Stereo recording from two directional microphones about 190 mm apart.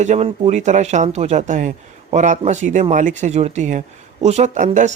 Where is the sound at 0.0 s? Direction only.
35° right (ahead or behind).